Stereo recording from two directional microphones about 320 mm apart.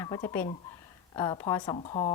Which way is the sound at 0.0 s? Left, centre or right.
Centre.